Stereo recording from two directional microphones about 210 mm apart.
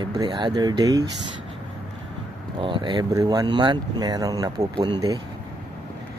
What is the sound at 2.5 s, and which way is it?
Speech, 25° right (ahead or behind).